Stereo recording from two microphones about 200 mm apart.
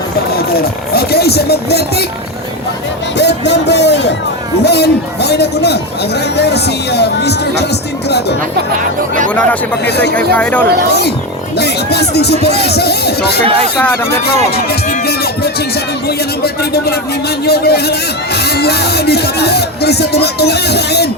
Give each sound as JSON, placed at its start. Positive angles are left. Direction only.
{"t": 0.3, "sound": "speech", "side_deg": 50}
{"t": 3.2, "sound": "speech", "side_deg": 60}
{"t": 9.3, "sound": "speech", "side_deg": 5}
{"t": 9.8, "sound": "speech", "side_deg": 55}
{"t": 10.3, "sound": "speech", "side_deg": 5}
{"t": 10.8, "sound": "speech", "side_deg": 55}
{"t": 13.4, "sound": "speech", "side_deg": -30}
{"t": 14.5, "sound": "speech", "side_deg": 50}